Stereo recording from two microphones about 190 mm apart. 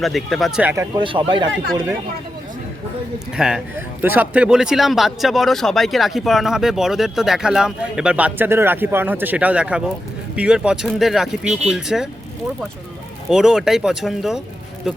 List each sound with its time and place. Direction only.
0.0 s a man's voice: centre (ahead or behind)
0.9 s speech: 25° right (ahead or behind)
3.3 s a man's voice: 5° right (ahead or behind)
13.3 s a man's voice: 5° right (ahead or behind)